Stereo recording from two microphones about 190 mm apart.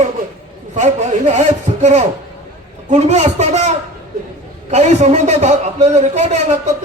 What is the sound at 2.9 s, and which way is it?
A man's voice, 35° right (ahead or behind).